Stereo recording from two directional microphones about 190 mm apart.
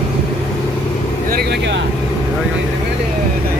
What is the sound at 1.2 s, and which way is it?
Speech, 55° right (ahead or behind).